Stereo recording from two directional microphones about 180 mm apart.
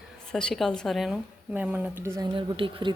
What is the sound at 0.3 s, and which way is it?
Speech, 5° left (ahead or behind).